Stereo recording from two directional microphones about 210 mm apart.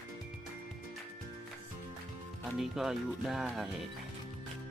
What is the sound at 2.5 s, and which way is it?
Speech, centre (ahead or behind).